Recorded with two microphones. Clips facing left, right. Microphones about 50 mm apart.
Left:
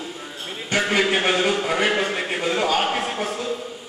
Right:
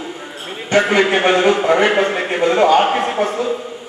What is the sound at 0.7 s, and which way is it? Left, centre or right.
A man's voice, centre.